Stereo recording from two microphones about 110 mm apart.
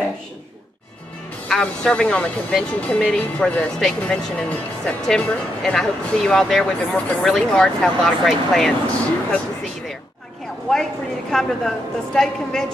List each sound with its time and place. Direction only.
1.5 s speech: 10° left (ahead or behind)
10.7 s a woman's voice: 5° left (ahead or behind)